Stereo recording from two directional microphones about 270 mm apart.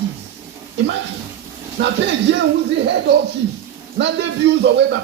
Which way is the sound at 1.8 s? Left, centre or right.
Right.